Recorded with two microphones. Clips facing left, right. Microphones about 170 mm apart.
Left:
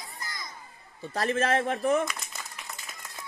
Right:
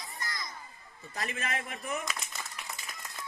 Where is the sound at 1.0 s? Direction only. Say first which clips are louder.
Left 11 dB; 85° left.